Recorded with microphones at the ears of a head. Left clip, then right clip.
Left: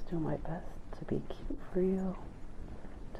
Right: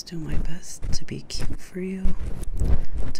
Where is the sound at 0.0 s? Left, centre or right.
Right.